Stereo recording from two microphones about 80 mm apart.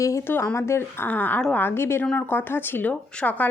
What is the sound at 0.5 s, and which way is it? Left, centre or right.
A woman's voice, left.